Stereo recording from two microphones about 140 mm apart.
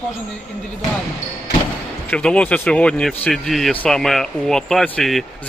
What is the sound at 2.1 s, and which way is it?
Speech, 10° left (ahead or behind).